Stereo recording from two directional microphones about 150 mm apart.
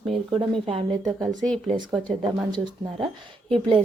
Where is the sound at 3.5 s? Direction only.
35° right (ahead or behind).